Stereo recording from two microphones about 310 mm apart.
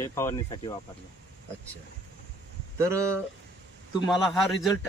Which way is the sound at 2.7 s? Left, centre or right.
Centre.